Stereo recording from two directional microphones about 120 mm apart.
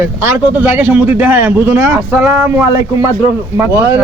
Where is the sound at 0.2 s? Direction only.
20° right (ahead or behind).